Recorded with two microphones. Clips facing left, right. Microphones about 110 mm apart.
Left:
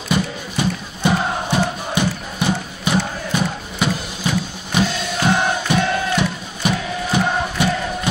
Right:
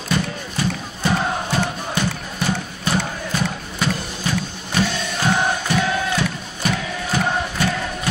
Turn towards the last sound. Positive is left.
turn(degrees=15)  # may be behind; listen again after turning